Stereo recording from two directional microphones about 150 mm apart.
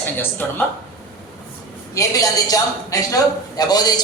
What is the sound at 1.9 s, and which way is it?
A man's voice, 25° left (ahead or behind).